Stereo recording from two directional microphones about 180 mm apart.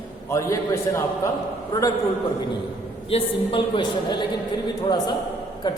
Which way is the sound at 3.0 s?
30° left (ahead or behind).